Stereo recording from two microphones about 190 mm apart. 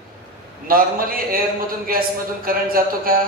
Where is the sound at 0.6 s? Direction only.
50° right (ahead or behind).